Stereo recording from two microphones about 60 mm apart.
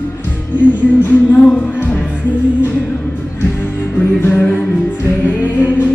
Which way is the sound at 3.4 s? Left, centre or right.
Left.